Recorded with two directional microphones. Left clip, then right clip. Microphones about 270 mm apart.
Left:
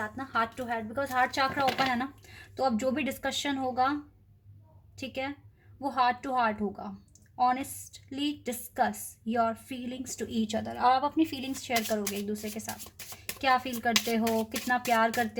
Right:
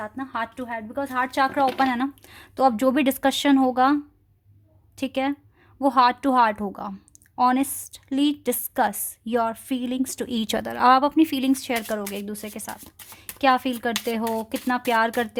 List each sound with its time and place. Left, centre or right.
0.3 s speech: right
4.9 s speech: right